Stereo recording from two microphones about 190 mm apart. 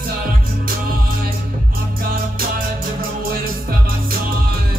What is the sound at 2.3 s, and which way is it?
Music, 50° right (ahead or behind).